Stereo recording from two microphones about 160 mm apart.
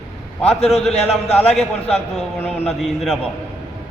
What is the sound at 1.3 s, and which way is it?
A man's voice, 5° left (ahead or behind).